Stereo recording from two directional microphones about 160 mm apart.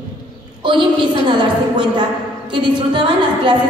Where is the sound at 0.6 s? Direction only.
30° right (ahead or behind).